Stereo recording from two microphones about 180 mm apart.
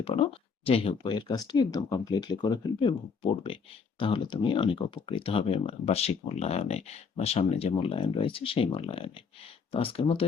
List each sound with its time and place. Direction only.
0.0 s speech: 30° left (ahead or behind)